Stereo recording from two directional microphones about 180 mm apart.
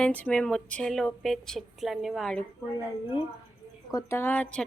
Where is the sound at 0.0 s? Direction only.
10° left (ahead or behind).